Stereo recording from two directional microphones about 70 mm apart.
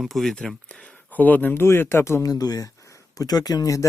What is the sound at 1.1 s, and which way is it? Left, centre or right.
Speech, left.